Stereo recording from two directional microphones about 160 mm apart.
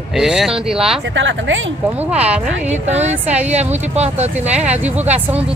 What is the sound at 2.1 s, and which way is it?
Speech, 10° right (ahead or behind).